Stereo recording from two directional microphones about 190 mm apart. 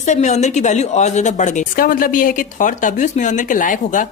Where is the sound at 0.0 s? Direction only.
40° left (ahead or behind).